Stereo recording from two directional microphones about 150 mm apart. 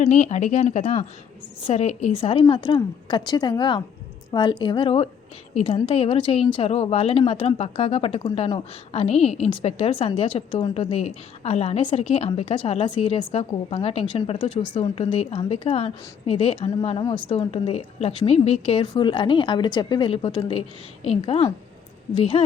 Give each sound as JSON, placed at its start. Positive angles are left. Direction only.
{"t": 0.0, "sound": "speech", "side_deg": 50}